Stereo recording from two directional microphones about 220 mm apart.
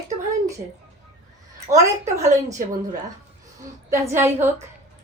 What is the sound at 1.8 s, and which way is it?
Speech, 15° right (ahead or behind).